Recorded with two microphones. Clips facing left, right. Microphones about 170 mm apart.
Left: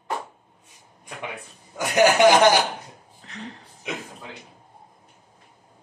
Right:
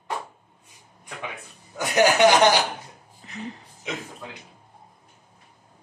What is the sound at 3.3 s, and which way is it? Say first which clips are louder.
Speech: right 2 dB; 5° right (ahead or behind).